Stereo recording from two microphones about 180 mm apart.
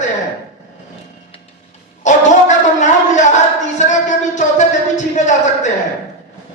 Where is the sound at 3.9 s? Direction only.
40° left (ahead or behind).